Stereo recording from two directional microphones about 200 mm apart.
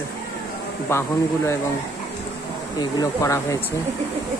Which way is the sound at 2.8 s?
15° left (ahead or behind).